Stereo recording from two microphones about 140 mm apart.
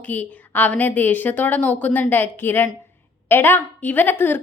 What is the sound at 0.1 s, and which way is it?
A woman's voice, 10° left (ahead or behind).